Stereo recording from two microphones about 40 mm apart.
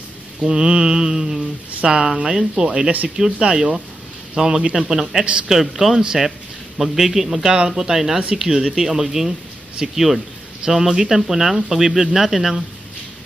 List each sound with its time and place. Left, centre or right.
0.5 s speech: centre
5.2 s a woman's voice: right
5.5 s a man's voice: centre
7.5 s a man's voice: centre